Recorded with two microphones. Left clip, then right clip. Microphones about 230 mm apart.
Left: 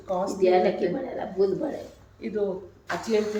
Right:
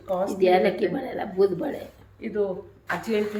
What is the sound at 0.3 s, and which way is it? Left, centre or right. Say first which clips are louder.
Speech: right 1 dB; right.